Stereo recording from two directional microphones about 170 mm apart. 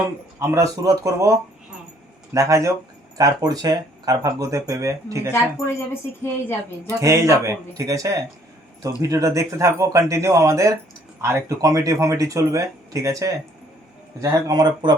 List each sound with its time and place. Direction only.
0.3 s speech: 15° right (ahead or behind)
5.3 s a woman's voice: 15° left (ahead or behind)
7.0 s speech: 20° right (ahead or behind)